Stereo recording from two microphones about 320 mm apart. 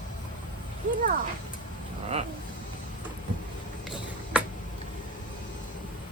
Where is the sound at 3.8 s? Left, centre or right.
Centre.